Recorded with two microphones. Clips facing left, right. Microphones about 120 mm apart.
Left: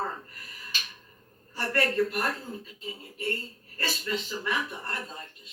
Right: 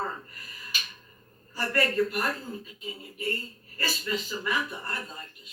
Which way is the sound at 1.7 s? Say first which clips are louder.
Even; 25° left (ahead or behind).